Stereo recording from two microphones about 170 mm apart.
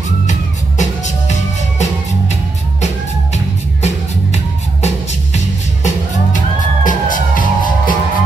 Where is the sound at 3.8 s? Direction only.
40° left (ahead or behind).